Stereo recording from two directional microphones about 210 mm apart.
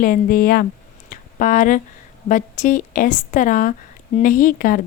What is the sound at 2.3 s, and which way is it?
Speech, 35° left (ahead or behind).